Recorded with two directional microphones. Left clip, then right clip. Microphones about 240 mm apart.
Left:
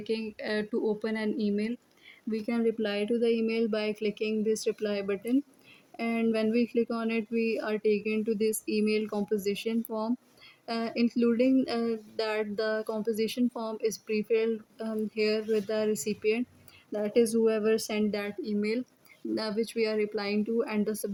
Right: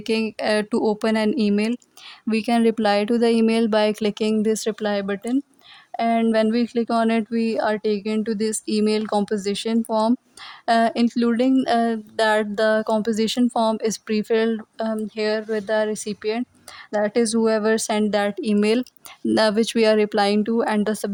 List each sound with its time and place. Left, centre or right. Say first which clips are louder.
0.0 s speech: right 11 dB; right